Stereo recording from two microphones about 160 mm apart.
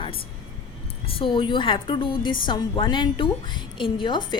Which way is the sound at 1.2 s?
30° left (ahead or behind).